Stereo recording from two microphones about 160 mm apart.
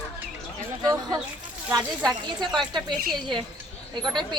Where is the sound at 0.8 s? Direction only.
20° right (ahead or behind).